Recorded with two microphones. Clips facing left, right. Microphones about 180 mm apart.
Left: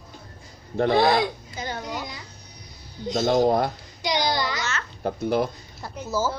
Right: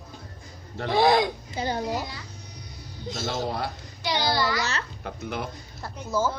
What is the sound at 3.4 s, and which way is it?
Speech, 45° left (ahead or behind).